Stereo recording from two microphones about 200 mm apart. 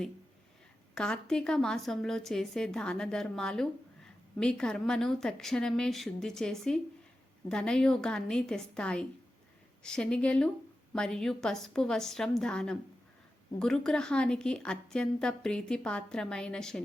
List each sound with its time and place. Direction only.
0.9 s a woman's voice: 5° left (ahead or behind)